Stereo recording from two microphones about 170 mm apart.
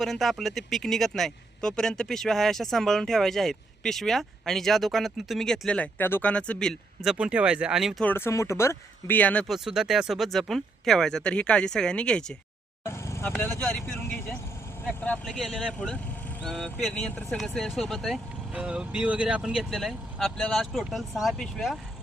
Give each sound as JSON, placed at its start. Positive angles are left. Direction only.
{"t": 0.0, "sound": "speech", "side_deg": 0}
{"t": 8.0, "sound": "speech", "side_deg": 15}
{"t": 12.8, "sound": "vehicle", "side_deg": 15}
{"t": 13.4, "sound": "speech", "side_deg": 5}